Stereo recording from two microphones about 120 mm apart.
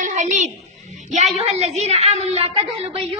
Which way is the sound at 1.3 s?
65° right (ahead or behind).